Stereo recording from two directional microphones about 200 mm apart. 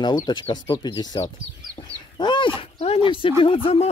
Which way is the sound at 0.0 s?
20° left (ahead or behind).